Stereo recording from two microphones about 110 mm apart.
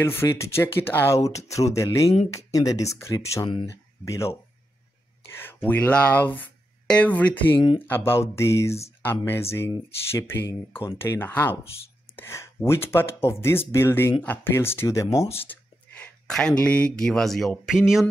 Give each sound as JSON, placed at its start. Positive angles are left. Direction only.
{"t": 0.0, "sound": "speech", "side_deg": 25}
{"t": 5.4, "sound": "speech", "side_deg": 20}
{"t": 16.0, "sound": "speech", "side_deg": 5}